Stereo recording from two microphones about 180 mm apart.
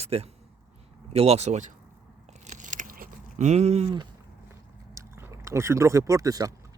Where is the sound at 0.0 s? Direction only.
35° right (ahead or behind).